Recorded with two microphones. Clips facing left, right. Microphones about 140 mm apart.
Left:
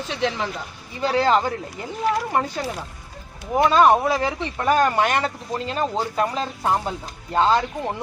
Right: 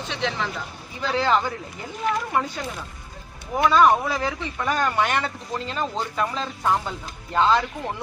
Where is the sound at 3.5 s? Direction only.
30° left (ahead or behind).